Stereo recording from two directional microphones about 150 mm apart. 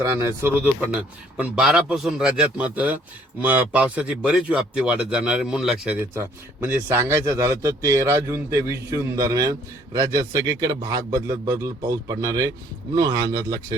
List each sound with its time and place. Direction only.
0.0 s a man's voice: 20° right (ahead or behind)